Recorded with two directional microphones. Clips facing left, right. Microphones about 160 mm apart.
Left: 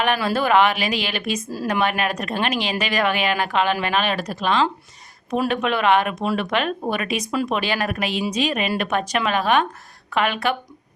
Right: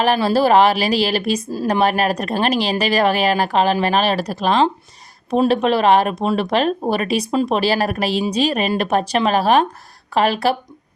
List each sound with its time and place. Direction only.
0.0 s speech: 35° right (ahead or behind)